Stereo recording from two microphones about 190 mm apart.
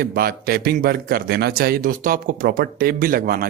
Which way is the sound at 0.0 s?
55° right (ahead or behind).